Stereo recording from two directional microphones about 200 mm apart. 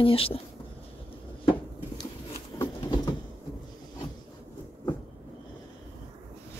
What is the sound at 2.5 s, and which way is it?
Patter, 20° left (ahead or behind).